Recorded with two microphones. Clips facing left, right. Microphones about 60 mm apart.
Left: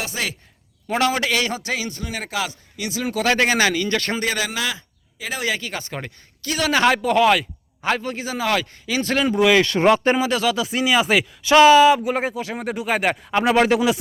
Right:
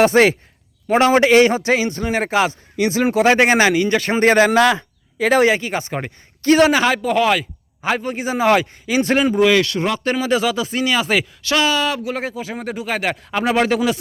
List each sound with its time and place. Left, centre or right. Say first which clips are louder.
0.0 s speech: right 15 dB; right
0.9 s a man's voice: right 7 dB; right
3.2 s speech: right 4 dB; right
4.2 s a man's voice: right 11 dB; right
5.5 s speech: right 7 dB; right
6.4 s a man's voice: right 12 dB; right
6.7 s a man's voice: even; centre
8.2 s speech: right 7 dB; right
9.2 s speech: even; centre
9.6 s speech: left 3 dB; left
10.2 s speech: right 2 dB; centre
11.4 s speech: left 9 dB; left
11.9 s speech: left 5 dB; centre
12.4 s speech: even; centre